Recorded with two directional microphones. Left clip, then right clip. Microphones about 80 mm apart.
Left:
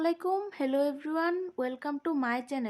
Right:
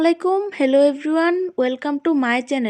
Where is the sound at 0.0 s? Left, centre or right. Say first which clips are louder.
Right 12 dB; right.